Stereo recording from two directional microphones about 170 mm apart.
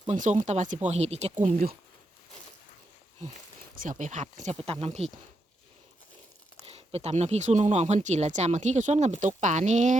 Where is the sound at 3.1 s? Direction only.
50° right (ahead or behind).